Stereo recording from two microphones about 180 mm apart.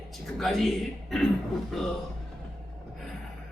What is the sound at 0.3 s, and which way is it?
A man's voice, centre (ahead or behind).